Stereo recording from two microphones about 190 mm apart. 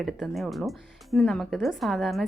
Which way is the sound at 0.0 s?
Centre (ahead or behind).